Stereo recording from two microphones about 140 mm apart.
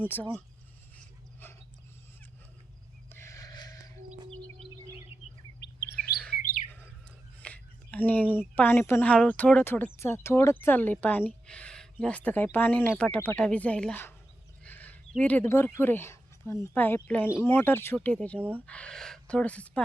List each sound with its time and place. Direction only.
0.0 s speech: 10° left (ahead or behind)
0.9 s a sound: 15° left (ahead or behind)
3.1 s a sound: 20° left (ahead or behind)
6.0 s chirp: 5° left (ahead or behind)
6.4 s bird: 80° left
7.3 s a woman's voice: 10° left (ahead or behind)